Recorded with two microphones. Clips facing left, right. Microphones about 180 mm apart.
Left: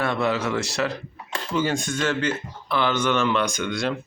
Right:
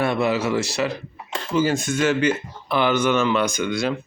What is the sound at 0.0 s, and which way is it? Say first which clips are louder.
Speech: right 3 dB; 10° right (ahead or behind).